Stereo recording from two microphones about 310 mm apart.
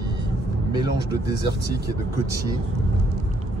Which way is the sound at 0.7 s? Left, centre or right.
Centre.